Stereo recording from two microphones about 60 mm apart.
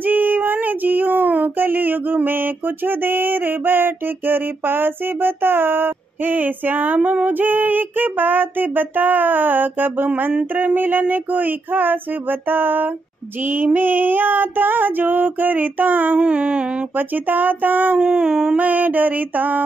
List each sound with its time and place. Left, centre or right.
0.0 s female singing: right
16.3 s music: centre
16.9 s female singing: right
17.9 s dog: centre
18.6 s music: right